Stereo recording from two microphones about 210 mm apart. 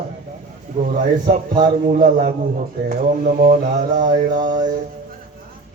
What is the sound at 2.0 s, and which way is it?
Mantra, 40° right (ahead or behind).